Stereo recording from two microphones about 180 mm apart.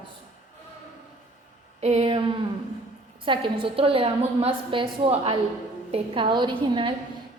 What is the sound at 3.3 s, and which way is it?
A woman's voice, 30° right (ahead or behind).